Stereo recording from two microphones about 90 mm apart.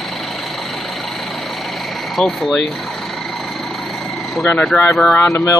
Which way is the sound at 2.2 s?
5° left (ahead or behind).